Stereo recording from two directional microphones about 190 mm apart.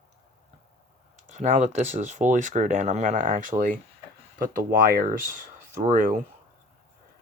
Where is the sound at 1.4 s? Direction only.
40° right (ahead or behind).